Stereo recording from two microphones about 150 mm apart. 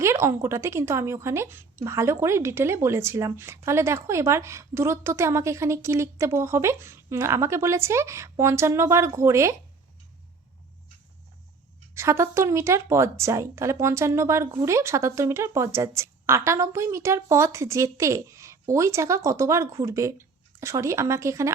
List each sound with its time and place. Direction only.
0.0 s a woman's voice: 20° right (ahead or behind)
11.9 s speech: 20° right (ahead or behind)